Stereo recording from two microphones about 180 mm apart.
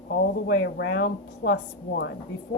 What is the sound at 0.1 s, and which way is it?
A woman's voice, 65° left (ahead or behind).